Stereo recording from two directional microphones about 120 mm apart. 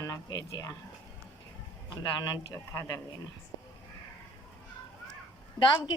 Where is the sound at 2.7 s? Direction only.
25° left (ahead or behind).